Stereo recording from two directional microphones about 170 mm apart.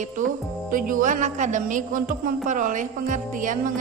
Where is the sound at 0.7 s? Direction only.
55° right (ahead or behind).